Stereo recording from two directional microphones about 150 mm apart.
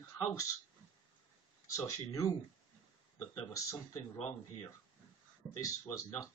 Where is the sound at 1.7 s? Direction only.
20° left (ahead or behind).